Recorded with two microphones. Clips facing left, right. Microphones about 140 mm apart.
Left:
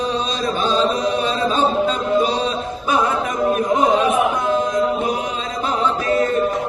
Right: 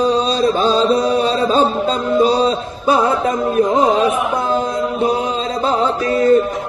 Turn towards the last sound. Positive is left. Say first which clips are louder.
# right 3 dB
turn(degrees=-35)  # may be behind; listen again after turning